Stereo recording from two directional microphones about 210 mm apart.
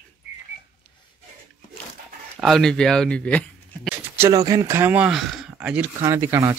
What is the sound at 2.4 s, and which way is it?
Speech, centre (ahead or behind).